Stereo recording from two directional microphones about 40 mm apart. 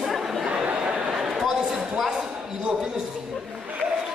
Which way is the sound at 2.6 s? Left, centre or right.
Centre.